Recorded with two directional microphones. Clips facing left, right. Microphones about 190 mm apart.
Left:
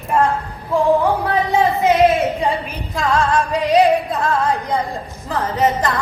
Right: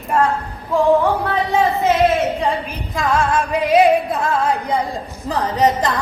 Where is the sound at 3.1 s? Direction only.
Centre (ahead or behind).